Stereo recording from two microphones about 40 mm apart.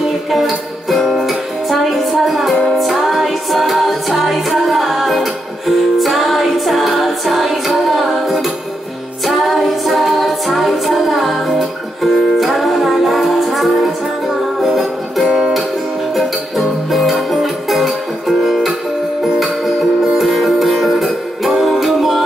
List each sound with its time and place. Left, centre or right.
0.0 s music: centre
15.2 s music: centre
16.2 s music: centre
20.2 s music: centre